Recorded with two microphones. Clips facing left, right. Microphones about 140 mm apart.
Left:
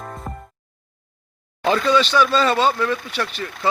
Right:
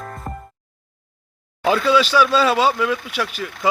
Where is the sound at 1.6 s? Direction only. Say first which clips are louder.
Right 1 dB; 5° right (ahead or behind).